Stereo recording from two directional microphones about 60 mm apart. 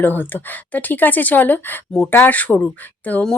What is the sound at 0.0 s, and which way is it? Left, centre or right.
Speech, left.